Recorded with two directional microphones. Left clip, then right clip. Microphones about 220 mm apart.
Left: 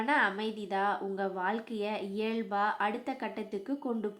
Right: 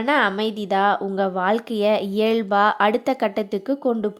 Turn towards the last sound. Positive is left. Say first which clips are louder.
# right 13 dB
turn(degrees=-40)  # may be behind; listen again after turning